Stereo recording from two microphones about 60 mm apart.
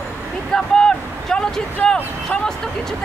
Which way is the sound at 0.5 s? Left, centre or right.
Centre.